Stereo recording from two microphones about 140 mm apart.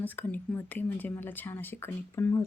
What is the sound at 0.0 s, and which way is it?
Speech, 10° left (ahead or behind).